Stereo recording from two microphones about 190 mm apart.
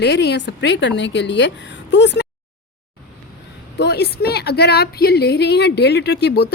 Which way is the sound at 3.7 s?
60° left (ahead or behind).